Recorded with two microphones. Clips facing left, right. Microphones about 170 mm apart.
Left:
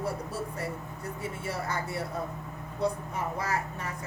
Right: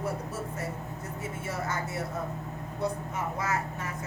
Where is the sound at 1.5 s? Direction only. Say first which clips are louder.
Even; 30° left (ahead or behind).